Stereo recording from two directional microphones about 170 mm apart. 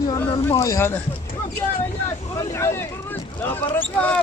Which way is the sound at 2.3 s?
15° left (ahead or behind).